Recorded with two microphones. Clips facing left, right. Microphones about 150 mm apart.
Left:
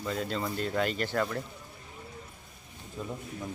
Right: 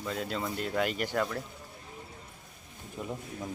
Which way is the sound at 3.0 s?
20° right (ahead or behind).